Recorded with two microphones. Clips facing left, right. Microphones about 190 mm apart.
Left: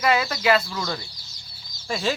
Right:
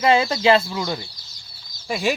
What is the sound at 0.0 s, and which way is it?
Speech, 25° right (ahead or behind).